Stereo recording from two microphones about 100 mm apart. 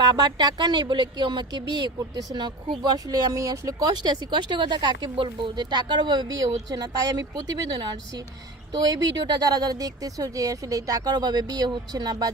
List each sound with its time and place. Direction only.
0.0 s speech: 45° right (ahead or behind)
5.1 s speech: 55° right (ahead or behind)